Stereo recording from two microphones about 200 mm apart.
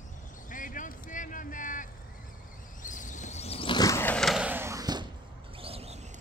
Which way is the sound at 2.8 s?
40° left (ahead or behind).